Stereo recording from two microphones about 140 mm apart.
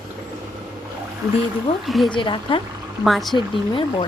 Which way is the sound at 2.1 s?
35° left (ahead or behind).